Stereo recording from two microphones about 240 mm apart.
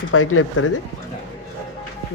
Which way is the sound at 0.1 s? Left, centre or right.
Left.